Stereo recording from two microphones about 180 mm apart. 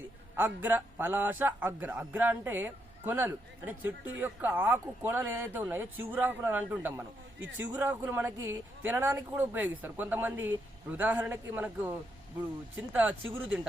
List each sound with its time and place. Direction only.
0.3 s a man's voice: 10° right (ahead or behind)
7.3 s a man's voice: 90° right
7.8 s a man's voice: 10° right (ahead or behind)